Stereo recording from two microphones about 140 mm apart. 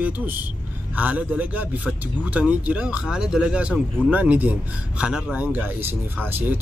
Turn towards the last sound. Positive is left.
turn(degrees=-15)  # may be behind; listen again after turning